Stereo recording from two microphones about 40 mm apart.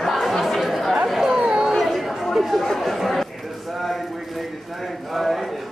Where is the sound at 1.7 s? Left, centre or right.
Centre.